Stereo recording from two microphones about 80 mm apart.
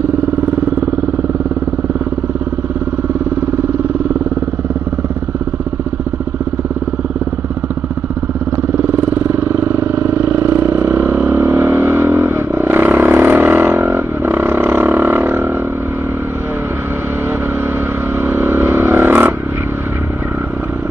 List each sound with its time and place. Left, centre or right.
9.3 s vehicle: right
18.2 s vehicle: right